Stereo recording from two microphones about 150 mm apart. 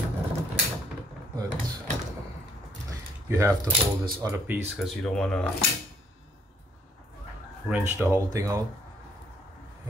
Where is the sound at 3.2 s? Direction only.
15° right (ahead or behind).